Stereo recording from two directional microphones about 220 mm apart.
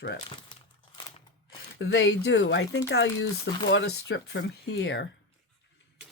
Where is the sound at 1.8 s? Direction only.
50° left (ahead or behind).